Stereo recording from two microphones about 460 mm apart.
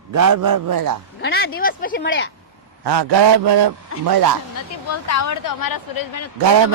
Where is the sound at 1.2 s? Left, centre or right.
Left.